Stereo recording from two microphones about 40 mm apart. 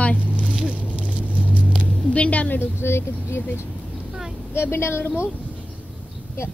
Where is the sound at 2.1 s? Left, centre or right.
Left.